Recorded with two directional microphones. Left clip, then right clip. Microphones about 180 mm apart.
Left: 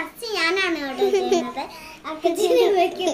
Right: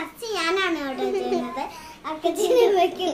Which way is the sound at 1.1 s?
35° left (ahead or behind).